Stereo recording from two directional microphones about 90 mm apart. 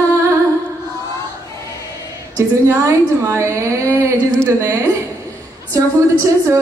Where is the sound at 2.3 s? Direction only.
35° right (ahead or behind).